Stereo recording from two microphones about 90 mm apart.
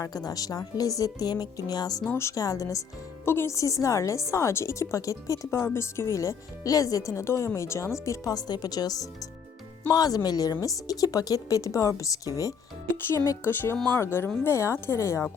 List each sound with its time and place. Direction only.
0.0 s speech: 45° left (ahead or behind)
2.0 s speech: 30° left (ahead or behind)
2.3 s speech: 40° left (ahead or behind)
3.2 s speech: 30° left (ahead or behind)
13.4 s speech: 25° left (ahead or behind)